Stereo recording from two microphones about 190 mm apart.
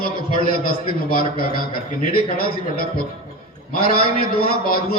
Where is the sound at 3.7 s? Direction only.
50° left (ahead or behind).